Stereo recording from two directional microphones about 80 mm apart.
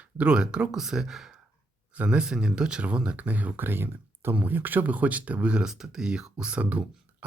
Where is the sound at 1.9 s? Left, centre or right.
Centre.